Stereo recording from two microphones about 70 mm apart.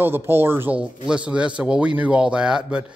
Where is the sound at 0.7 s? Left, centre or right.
Centre.